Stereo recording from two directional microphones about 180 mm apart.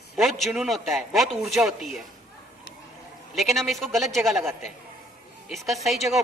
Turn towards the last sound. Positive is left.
turn(degrees=0)  # may be behind; listen again after turning